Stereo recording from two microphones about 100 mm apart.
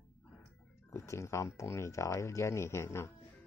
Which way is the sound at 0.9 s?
30° left (ahead or behind).